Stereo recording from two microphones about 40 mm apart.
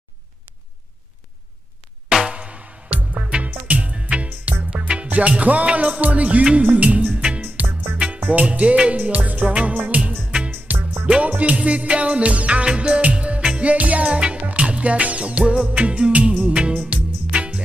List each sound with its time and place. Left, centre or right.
2.0 s music: centre
2.3 s music: right
3.6 s music: right
7.4 s music: right
8.3 s music: right
11.1 s music: right
13.7 s music: right
14.0 s music: right
16.5 s music: right